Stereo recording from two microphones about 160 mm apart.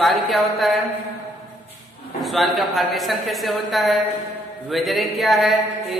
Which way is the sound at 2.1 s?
Centre (ahead or behind).